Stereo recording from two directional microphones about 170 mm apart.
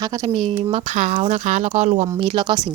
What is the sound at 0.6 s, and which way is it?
Speech, 35° right (ahead or behind).